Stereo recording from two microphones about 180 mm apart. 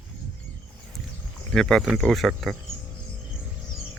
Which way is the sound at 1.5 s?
5° left (ahead or behind).